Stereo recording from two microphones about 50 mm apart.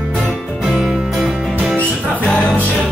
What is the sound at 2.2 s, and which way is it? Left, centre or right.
Music, centre.